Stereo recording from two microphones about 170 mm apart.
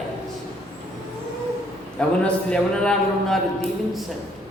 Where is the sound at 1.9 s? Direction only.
5° left (ahead or behind).